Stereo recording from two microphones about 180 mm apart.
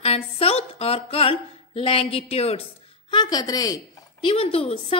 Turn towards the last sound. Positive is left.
turn(degrees=30)  # may be behind; listen again after turning